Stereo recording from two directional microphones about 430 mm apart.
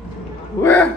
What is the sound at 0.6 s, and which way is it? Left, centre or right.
Speech, centre.